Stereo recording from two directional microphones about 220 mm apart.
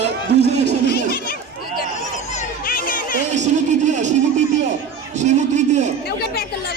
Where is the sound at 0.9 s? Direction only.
45° left (ahead or behind).